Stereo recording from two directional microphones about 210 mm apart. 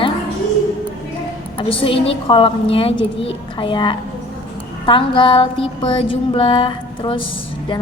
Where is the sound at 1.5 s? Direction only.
25° left (ahead or behind).